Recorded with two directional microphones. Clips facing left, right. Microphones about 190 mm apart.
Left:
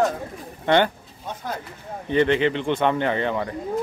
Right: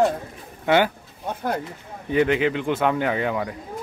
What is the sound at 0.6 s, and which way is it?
Speech, 5° right (ahead or behind).